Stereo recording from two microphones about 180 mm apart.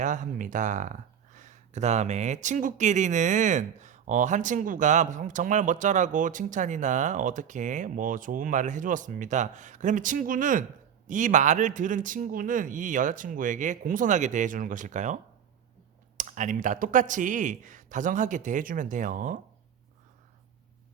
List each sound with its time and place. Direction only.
0.0 s speech: 45° right (ahead or behind)